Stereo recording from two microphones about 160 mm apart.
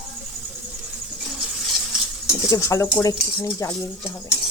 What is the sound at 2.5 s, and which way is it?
Speech, 20° left (ahead or behind).